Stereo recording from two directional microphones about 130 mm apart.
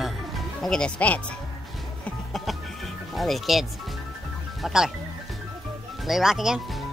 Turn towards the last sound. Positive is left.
turn(degrees=0)  # may be behind; listen again after turning